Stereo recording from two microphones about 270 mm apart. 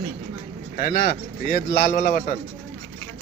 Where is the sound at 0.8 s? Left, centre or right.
Left.